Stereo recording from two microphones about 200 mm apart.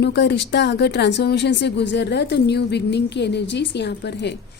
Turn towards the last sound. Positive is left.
turn(degrees=60)  # may be behind; listen again after turning